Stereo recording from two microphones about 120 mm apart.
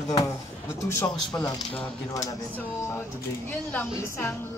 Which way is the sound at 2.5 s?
15° left (ahead or behind).